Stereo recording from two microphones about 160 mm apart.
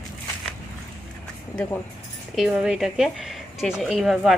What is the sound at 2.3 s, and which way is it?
A woman's voice, 5° right (ahead or behind).